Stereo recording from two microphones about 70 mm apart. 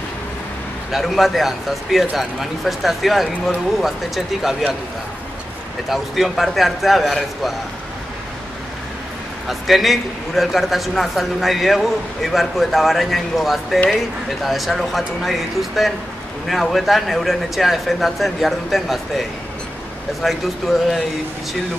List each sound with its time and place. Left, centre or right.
0.9 s a man's voice: centre
5.9 s a man's voice: centre
9.5 s a man's voice: centre